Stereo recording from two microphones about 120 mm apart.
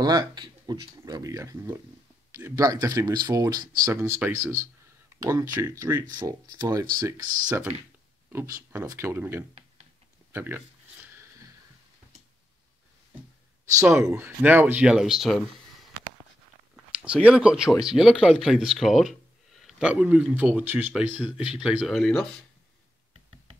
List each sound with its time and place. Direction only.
0.0 s speech: 35° right (ahead or behind)
6.1 s speech: 35° right (ahead or behind)
8.3 s speech: 25° right (ahead or behind)
13.9 s speech: 20° right (ahead or behind)
16.7 s speech: 10° right (ahead or behind)